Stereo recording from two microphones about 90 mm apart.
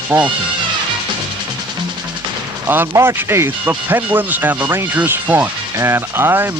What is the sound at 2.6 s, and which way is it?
Speech, 25° right (ahead or behind).